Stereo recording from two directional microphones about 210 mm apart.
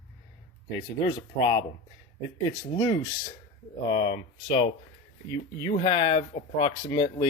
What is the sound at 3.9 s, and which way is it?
Speech, 25° left (ahead or behind).